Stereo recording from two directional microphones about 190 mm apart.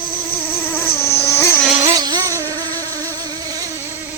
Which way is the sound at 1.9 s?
20° right (ahead or behind).